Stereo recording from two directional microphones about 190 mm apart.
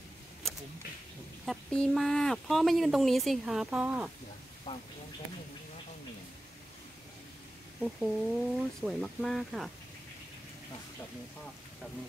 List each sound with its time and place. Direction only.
1.4 s speech: centre (ahead or behind)
4.7 s a sound: 20° left (ahead or behind)
7.8 s speech: centre (ahead or behind)